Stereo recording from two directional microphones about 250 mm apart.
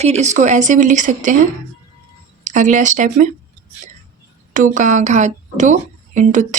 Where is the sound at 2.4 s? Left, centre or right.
Right.